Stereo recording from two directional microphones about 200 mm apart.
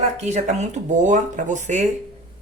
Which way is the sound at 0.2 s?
35° right (ahead or behind).